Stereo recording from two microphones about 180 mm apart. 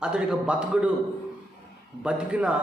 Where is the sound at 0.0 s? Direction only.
5° right (ahead or behind).